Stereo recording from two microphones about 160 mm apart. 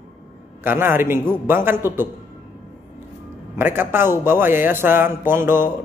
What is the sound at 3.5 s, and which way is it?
A man's voice, 15° right (ahead or behind).